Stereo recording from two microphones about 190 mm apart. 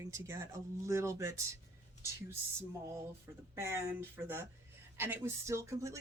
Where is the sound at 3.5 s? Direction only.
15° right (ahead or behind).